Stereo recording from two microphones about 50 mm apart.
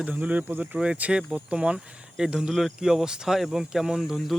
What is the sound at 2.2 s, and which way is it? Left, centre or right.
Speech, centre.